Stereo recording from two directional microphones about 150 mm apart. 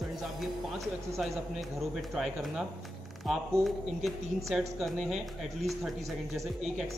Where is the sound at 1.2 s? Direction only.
Centre (ahead or behind).